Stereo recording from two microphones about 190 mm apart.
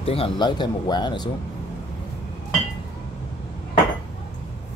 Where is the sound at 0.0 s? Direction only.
30° left (ahead or behind).